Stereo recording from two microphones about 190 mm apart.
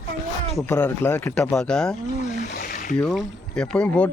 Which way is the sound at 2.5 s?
50° left (ahead or behind).